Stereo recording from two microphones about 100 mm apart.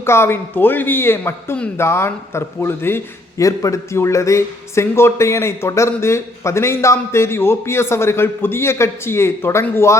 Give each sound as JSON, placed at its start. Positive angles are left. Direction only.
{"t": 0.0, "sound": "speech", "side_deg": 25}